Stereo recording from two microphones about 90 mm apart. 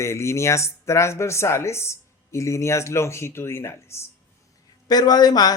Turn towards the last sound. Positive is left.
turn(degrees=45)  # may be behind; listen again after turning